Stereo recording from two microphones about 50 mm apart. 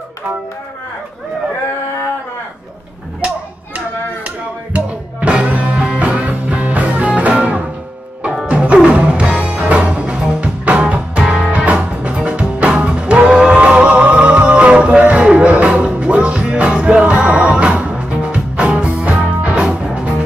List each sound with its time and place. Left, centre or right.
4.7 s music: right